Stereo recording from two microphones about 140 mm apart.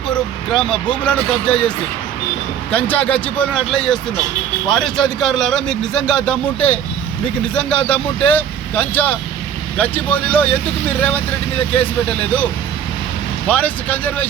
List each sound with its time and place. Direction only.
0.1 s vehicle: 5° left (ahead or behind)
1.0 s speech: 5° left (ahead or behind)
2.7 s speech: 10° left (ahead or behind)
13.5 s speech: 10° left (ahead or behind)